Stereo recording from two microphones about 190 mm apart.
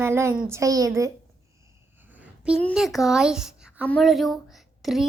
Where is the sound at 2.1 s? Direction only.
5° right (ahead or behind).